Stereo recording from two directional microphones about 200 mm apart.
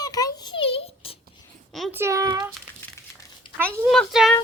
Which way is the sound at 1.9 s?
15° right (ahead or behind).